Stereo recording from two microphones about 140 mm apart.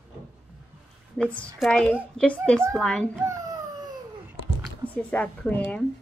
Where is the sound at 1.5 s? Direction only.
5° left (ahead or behind).